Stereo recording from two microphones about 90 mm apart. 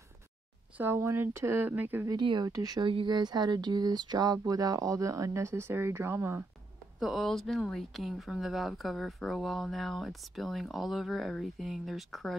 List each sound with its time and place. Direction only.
0.7 s speech: 25° right (ahead or behind)
2.1 s speech: 60° right (ahead or behind)
2.5 s speech: 40° right (ahead or behind)
2.8 s speech: 75° right (ahead or behind)
3.1 s speech: 50° right (ahead or behind); by 6.4 s 30° right (ahead or behind)
7.0 s speech: centre (ahead or behind)